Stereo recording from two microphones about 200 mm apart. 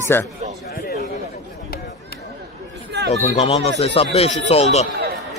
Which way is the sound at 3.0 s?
35° left (ahead or behind).